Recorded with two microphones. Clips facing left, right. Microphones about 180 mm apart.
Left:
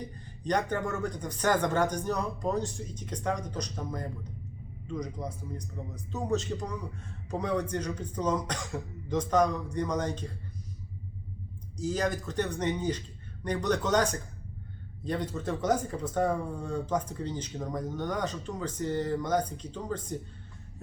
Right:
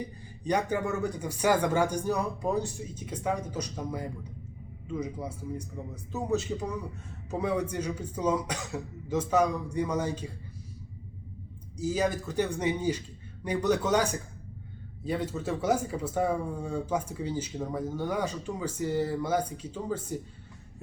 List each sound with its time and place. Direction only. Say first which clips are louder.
0.0 s speech: right 1 dB; 10° right (ahead or behind)
11.8 s speech: right 2 dB; 5° right (ahead or behind)